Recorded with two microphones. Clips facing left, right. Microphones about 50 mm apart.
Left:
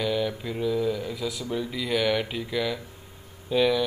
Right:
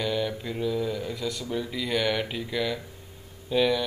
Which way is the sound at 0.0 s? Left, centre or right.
Centre.